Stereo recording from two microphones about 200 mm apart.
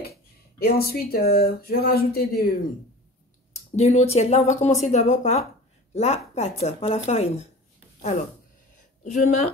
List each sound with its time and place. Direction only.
0.0 s speech: 50° left (ahead or behind)
3.5 s speech: 35° left (ahead or behind)
9.0 s speech: 35° left (ahead or behind)